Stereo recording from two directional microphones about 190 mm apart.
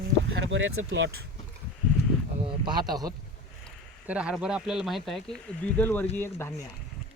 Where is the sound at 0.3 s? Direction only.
90° right.